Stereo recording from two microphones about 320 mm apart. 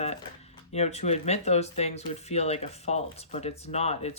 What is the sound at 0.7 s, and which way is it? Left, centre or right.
Speech, centre.